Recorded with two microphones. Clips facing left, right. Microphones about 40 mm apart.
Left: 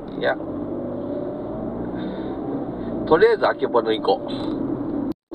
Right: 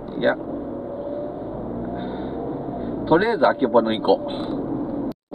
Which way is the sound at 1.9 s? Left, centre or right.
Centre.